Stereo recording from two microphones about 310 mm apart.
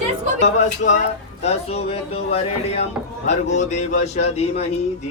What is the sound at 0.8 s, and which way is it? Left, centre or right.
Speech, left.